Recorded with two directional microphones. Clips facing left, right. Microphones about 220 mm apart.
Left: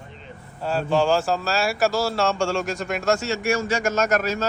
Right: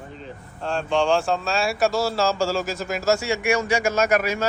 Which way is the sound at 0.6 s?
5° left (ahead or behind).